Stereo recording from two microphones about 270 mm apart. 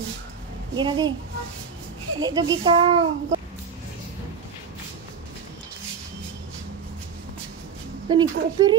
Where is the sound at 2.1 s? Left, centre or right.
Centre.